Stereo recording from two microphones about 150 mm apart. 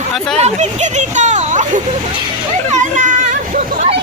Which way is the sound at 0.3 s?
50° right (ahead or behind).